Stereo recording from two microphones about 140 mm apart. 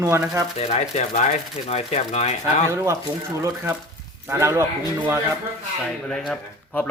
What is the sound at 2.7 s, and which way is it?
Speech, 20° right (ahead or behind).